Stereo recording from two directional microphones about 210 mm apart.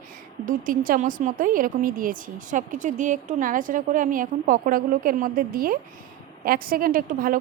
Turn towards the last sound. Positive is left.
turn(degrees=-40)  # may be behind; listen again after turning